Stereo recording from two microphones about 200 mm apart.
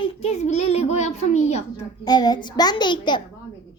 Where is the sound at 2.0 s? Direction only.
20° left (ahead or behind).